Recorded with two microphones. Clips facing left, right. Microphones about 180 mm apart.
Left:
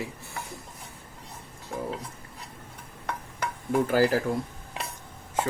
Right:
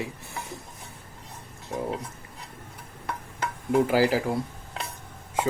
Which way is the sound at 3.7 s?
10° right (ahead or behind).